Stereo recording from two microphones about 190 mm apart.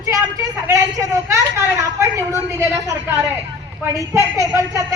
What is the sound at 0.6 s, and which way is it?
A woman's voice, 15° right (ahead or behind).